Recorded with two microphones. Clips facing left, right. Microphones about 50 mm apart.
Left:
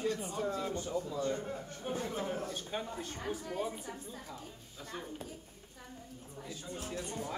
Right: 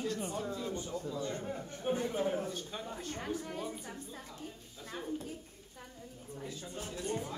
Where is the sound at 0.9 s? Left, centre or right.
Left.